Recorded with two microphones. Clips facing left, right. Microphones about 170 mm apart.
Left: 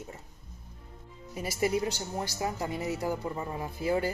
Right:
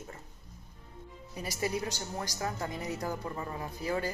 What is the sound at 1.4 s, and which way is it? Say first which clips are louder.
Speech: left 5 dB; 15° left (ahead or behind).